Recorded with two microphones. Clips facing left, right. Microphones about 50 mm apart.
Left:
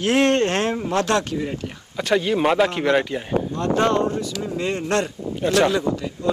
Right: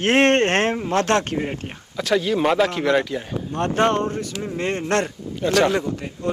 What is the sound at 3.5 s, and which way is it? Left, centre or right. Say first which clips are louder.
Speech: right 1 dB; right.